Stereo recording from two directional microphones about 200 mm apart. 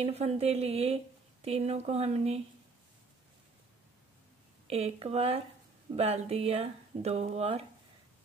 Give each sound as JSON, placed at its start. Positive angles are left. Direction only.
{"t": 0.0, "sound": "a woman's voice", "side_deg": -30}
{"t": 4.6, "sound": "a woman's voice", "side_deg": -30}